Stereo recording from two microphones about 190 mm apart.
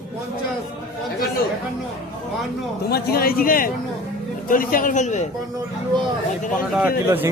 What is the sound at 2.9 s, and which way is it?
Speech, 55° left (ahead or behind).